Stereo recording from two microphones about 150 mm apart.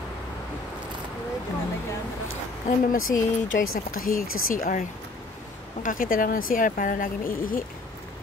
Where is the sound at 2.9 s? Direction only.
65° left (ahead or behind).